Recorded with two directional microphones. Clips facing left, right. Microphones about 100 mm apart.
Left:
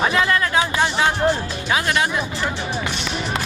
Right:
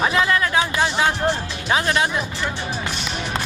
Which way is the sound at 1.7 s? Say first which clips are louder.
Right 1 dB; 30° right (ahead or behind).